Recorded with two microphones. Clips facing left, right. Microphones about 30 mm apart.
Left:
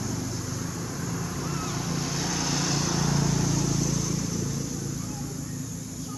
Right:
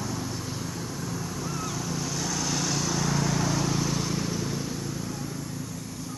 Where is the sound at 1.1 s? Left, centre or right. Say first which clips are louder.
Left 1 dB; centre.